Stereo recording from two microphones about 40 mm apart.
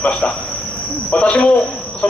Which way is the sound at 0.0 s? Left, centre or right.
Left.